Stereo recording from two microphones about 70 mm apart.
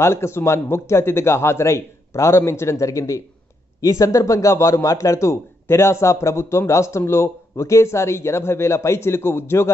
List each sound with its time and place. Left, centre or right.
0.0 s a man's voice: left